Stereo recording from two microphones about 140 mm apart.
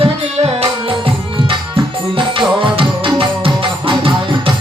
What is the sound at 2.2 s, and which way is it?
Music, 35° right (ahead or behind).